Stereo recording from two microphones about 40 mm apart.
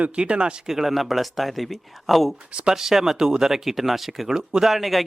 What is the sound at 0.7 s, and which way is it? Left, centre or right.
Speech, centre.